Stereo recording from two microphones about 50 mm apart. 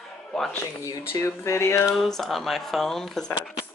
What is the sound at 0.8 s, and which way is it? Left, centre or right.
Speech, left.